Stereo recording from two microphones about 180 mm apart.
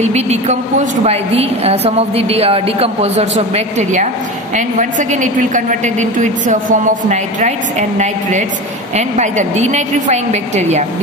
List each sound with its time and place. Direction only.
0.0 s a woman's voice: 40° right (ahead or behind)